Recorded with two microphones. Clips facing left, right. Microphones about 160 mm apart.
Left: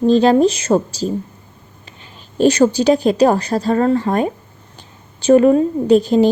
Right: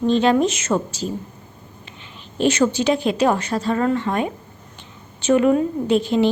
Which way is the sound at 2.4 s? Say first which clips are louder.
Left 5 dB; 40° left (ahead or behind).